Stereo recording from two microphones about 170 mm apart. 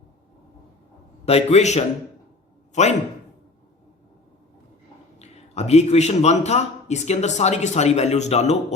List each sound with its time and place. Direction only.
1.2 s a man's voice: 35° left (ahead or behind)
5.2 s a man's voice: 40° left (ahead or behind)